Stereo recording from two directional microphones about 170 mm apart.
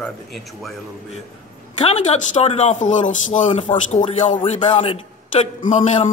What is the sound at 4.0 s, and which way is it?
Speech, 30° left (ahead or behind).